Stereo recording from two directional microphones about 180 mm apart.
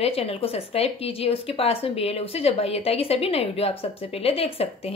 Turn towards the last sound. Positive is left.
turn(degrees=35)  # may be behind; listen again after turning